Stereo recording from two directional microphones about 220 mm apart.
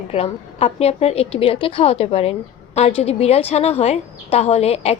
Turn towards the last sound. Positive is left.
turn(degrees=30)  # may be behind; listen again after turning